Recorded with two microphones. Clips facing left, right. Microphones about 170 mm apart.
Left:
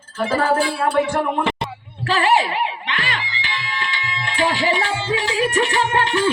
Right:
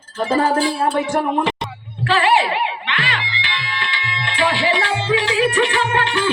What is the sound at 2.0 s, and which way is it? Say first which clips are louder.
Speech: right 1 dB; 40° left (ahead or behind).